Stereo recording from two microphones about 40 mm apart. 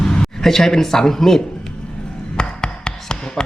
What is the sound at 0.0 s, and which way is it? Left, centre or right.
Speech, centre.